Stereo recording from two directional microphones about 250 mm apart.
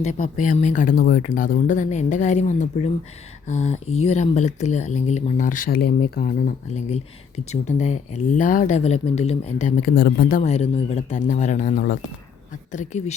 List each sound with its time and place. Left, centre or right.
0.0 s speech: left